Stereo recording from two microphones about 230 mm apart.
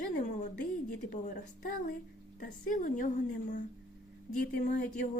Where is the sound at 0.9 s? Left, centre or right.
Left.